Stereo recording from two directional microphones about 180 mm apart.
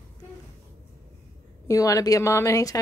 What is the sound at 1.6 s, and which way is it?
A woman's voice, 20° left (ahead or behind).